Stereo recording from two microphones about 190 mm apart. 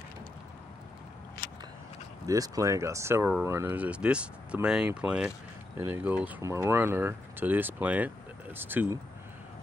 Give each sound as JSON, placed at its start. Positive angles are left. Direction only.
{"t": 2.2, "sound": "speech", "side_deg": -20}